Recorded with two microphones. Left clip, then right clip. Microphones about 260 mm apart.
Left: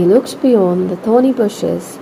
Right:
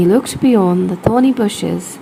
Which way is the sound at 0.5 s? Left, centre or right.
Right.